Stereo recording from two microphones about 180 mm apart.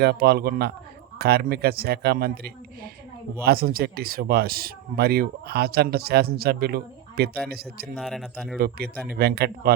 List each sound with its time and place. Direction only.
0.0 s speech: 65° right (ahead or behind)
7.9 s speech: centre (ahead or behind)
8.5 s speech: 55° right (ahead or behind)